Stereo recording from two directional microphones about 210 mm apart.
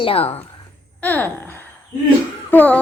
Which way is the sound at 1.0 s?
10° left (ahead or behind).